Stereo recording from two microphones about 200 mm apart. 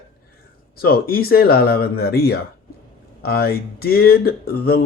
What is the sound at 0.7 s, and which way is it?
Speech, 50° left (ahead or behind).